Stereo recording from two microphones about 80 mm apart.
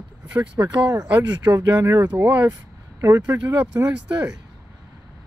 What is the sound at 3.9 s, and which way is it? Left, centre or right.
Speech, centre.